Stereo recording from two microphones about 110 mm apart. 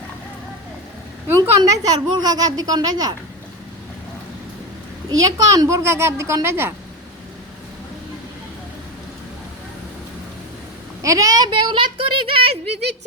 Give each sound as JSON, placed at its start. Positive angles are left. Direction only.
{"t": 1.4, "sound": "a woman's voice", "side_deg": -35}
{"t": 5.0, "sound": "a woman's voice", "side_deg": -35}
{"t": 11.0, "sound": "a woman's voice", "side_deg": -30}
{"t": 11.4, "sound": "speech", "side_deg": -45}